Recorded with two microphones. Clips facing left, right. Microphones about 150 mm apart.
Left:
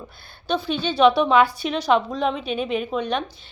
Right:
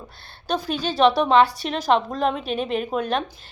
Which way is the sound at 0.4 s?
40° right (ahead or behind).